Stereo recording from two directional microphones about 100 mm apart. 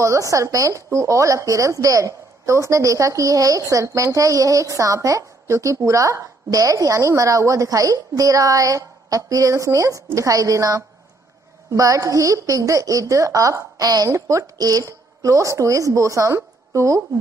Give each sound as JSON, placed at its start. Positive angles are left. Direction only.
{"t": 0.0, "sound": "speech", "side_deg": -30}